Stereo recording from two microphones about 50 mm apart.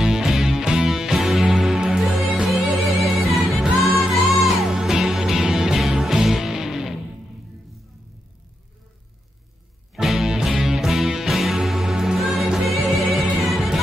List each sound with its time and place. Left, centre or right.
0.0 s music: centre
4.6 s music: centre
9.9 s music: centre